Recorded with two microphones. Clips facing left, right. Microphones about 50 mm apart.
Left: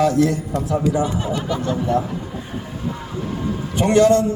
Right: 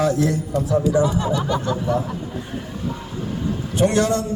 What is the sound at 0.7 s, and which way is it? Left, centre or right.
Speech, left.